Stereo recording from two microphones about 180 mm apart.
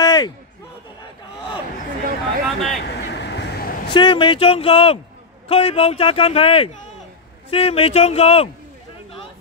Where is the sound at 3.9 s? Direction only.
25° left (ahead or behind).